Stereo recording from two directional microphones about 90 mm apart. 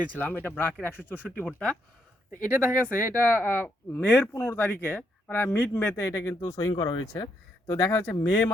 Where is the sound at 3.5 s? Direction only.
20° left (ahead or behind).